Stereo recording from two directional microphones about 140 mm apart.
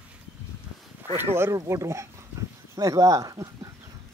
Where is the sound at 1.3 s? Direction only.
20° right (ahead or behind).